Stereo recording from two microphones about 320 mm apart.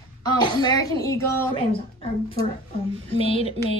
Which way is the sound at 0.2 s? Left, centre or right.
Centre.